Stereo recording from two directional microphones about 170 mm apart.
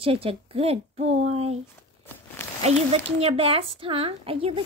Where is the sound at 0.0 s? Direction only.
35° right (ahead or behind).